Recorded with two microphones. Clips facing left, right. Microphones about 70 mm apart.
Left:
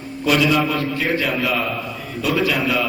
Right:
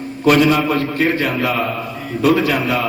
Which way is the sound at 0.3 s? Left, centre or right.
Right.